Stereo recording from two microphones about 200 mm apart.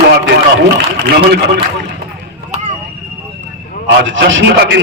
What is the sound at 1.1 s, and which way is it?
Speech, 55° right (ahead or behind).